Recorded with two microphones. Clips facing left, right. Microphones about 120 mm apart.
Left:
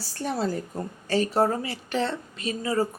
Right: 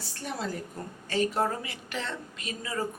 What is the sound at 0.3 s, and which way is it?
A woman's voice, 35° left (ahead or behind).